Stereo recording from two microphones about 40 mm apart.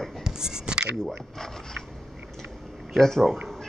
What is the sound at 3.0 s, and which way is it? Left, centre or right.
Speech, centre.